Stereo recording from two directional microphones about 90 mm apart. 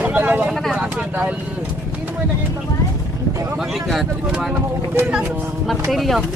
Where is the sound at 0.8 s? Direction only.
10° right (ahead or behind).